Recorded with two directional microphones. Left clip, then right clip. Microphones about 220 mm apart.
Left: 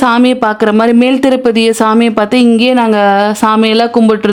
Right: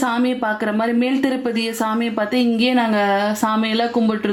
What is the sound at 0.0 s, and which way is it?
A woman's voice, 50° left (ahead or behind).